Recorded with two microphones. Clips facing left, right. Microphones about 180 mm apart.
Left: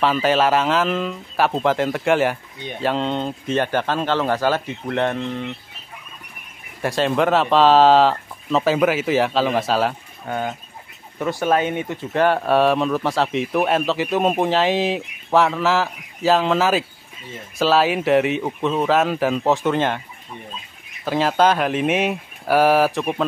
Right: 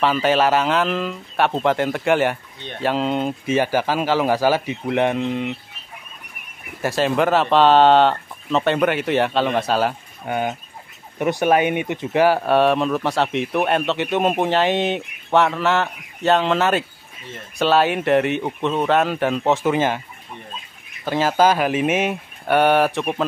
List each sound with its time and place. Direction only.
0.0 s speech: centre (ahead or behind); by 5.6 s 15° right (ahead or behind)
6.8 s speech: centre (ahead or behind)
10.2 s speech: 15° right (ahead or behind)
12.2 s speech: 5° right (ahead or behind)
21.0 s speech: centre (ahead or behind)